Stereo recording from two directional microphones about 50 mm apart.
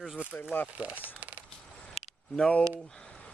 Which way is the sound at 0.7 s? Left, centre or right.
Right.